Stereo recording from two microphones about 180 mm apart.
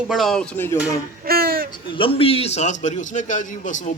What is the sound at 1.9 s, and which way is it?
A man's voice, 30° left (ahead or behind).